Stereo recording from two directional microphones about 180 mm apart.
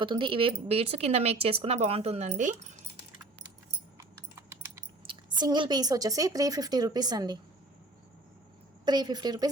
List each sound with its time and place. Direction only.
0.0 s speech: 30° right (ahead or behind)
3.9 s typing: 15° right (ahead or behind)
5.0 s a woman's voice: 25° right (ahead or behind)
8.8 s a woman's voice: 25° right (ahead or behind)